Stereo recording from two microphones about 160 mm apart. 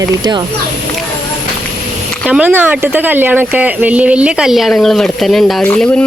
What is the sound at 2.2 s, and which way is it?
Speech, 5° right (ahead or behind).